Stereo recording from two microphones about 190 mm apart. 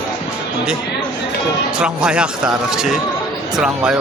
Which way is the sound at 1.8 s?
5° right (ahead or behind).